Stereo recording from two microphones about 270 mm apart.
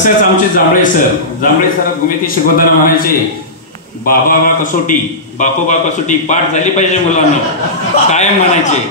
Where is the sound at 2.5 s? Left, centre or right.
Left.